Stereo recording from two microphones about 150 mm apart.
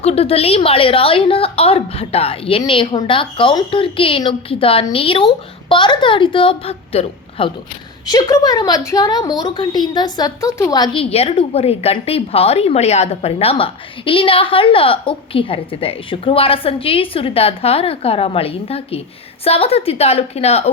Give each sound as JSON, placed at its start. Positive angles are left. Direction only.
{"t": 0.0, "sound": "a woman's voice", "side_deg": 45}
{"t": 8.0, "sound": "a woman's voice", "side_deg": 25}
{"t": 11.0, "sound": "a woman's voice", "side_deg": 40}